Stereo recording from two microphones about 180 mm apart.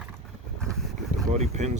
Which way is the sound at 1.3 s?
40° right (ahead or behind).